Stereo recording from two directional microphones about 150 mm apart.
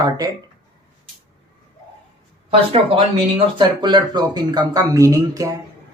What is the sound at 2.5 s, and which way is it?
Speech, 40° right (ahead or behind).